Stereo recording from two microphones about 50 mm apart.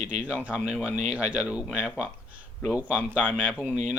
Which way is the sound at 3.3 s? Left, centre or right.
Right.